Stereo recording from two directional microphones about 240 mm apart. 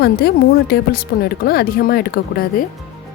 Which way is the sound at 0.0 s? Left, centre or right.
Left.